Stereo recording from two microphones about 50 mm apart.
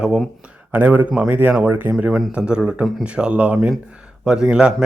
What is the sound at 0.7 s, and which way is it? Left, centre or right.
Speech, right.